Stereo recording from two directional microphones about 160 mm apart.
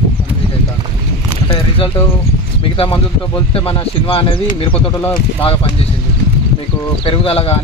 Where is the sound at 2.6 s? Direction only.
35° left (ahead or behind).